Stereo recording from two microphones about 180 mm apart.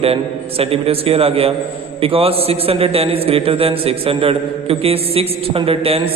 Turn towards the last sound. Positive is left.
turn(degrees=-30)  # may be behind; listen again after turning